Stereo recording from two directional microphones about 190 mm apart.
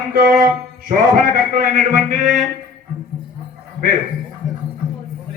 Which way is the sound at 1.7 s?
40° right (ahead or behind).